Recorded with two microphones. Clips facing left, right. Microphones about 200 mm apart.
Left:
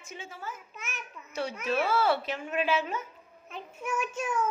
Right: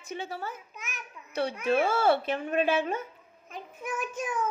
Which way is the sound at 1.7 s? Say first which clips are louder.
Right 2 dB; 50° right (ahead or behind).